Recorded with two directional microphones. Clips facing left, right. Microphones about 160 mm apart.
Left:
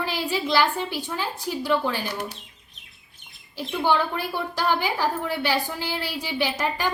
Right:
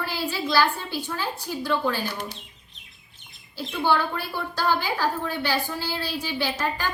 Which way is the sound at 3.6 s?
15° left (ahead or behind).